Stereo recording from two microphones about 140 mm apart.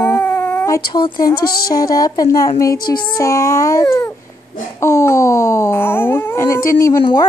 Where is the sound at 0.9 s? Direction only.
35° left (ahead or behind).